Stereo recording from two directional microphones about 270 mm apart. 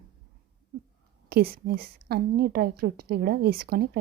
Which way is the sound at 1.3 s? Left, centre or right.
Right.